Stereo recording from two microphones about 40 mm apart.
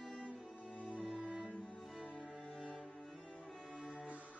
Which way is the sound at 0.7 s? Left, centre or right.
Left.